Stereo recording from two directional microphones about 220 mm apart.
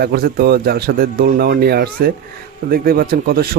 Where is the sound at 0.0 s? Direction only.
45° right (ahead or behind).